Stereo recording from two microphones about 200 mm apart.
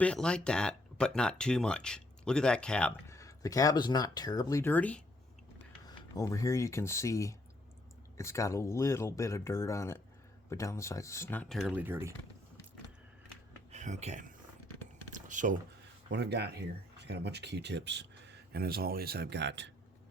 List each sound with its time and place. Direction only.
0.0 s speech: 5° left (ahead or behind)
6.1 s speech: 15° left (ahead or behind); by 12.1 s 10° right (ahead or behind)
13.7 s speech: 35° right (ahead or behind)
15.1 s a sound: 40° right (ahead or behind)
16.0 s speech: 60° right (ahead or behind)